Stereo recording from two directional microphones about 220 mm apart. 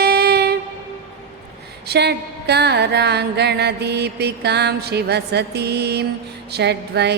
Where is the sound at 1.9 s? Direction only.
50° right (ahead or behind).